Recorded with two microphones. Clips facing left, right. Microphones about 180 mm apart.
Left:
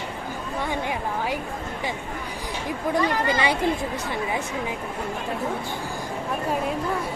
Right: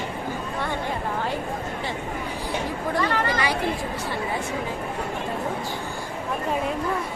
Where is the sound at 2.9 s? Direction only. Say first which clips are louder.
Left 2 dB; 15° left (ahead or behind).